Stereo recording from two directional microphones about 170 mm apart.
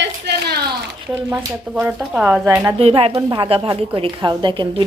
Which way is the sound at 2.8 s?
35° right (ahead or behind).